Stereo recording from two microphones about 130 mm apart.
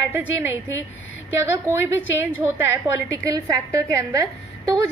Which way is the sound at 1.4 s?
20° right (ahead or behind).